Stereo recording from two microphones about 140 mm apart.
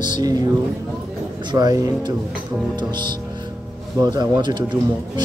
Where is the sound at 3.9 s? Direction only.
30° right (ahead or behind).